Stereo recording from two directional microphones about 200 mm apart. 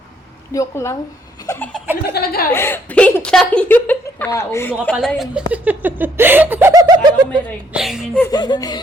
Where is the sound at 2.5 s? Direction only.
10° left (ahead or behind).